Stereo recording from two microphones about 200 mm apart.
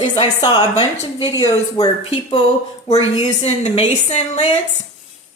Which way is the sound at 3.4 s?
35° left (ahead or behind).